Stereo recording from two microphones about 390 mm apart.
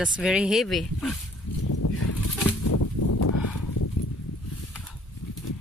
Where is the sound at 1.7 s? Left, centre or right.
Left.